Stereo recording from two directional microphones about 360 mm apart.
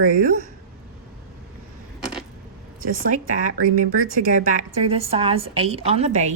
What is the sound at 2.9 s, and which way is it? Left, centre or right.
A woman's voice, right.